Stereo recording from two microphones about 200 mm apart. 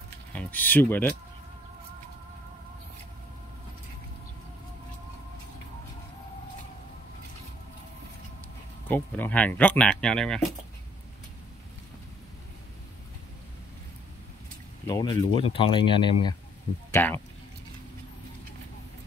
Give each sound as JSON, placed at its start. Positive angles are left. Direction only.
{"t": 0.3, "sound": "speech", "side_deg": 5}
{"t": 8.8, "sound": "speech", "side_deg": 10}
{"t": 14.9, "sound": "speech", "side_deg": 20}
{"t": 16.9, "sound": "speech", "side_deg": 10}